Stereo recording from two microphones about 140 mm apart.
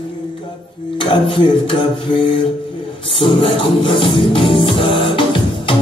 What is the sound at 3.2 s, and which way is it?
Music, 40° left (ahead or behind).